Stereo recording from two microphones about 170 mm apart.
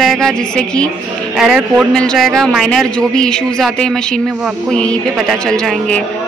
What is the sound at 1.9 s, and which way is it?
Speech, 5° left (ahead or behind).